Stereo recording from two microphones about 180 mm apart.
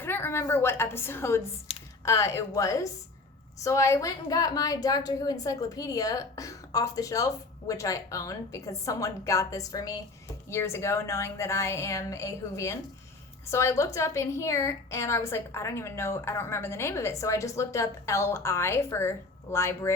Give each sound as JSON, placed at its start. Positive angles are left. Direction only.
{"t": 0.0, "sound": "a woman's voice", "side_deg": 10}
{"t": 1.7, "sound": "computer keyboard", "side_deg": 35}
{"t": 2.0, "sound": "a woman's voice", "side_deg": 15}